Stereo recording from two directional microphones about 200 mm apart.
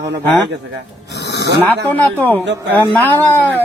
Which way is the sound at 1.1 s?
60° left (ahead or behind).